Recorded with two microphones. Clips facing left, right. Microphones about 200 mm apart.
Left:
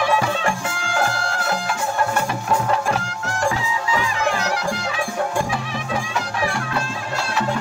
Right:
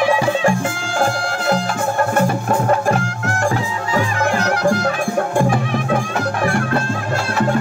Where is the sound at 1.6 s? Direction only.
50° right (ahead or behind).